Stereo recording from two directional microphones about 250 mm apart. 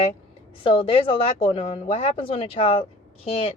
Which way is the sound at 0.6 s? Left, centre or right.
Left.